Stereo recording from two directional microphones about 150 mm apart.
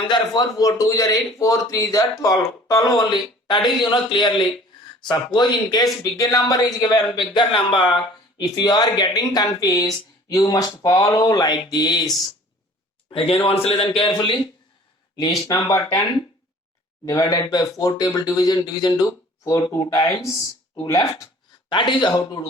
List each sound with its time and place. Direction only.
0.0 s a man's voice: 30° left (ahead or behind)